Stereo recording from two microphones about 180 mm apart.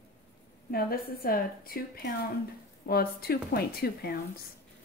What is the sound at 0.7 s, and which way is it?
A woman's voice, 55° left (ahead or behind).